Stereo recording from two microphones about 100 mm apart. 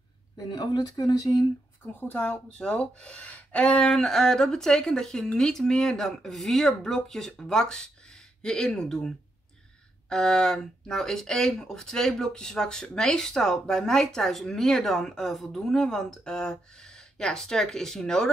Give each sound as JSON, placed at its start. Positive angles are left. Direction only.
{"t": 0.4, "sound": "speech", "side_deg": 45}
{"t": 2.0, "sound": "speech", "side_deg": 15}